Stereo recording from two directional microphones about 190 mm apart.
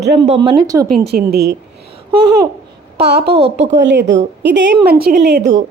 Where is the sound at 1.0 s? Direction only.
55° right (ahead or behind).